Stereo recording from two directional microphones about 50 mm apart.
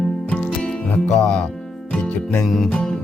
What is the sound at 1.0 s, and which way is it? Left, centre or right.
Speech, centre.